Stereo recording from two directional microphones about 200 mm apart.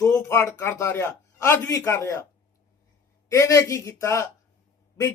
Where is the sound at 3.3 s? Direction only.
15° left (ahead or behind).